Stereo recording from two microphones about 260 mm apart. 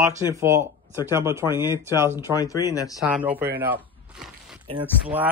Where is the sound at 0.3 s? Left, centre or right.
Centre.